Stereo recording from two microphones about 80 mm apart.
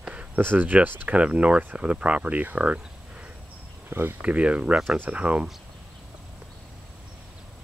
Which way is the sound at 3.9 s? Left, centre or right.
Right.